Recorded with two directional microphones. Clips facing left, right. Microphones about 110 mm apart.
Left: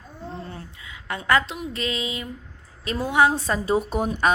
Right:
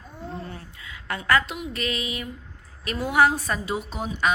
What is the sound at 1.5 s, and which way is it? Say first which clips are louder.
A woman's voice: left 1 dB; 25° left (ahead or behind).